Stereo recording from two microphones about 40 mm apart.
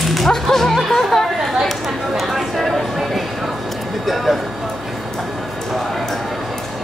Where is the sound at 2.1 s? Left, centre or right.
Centre.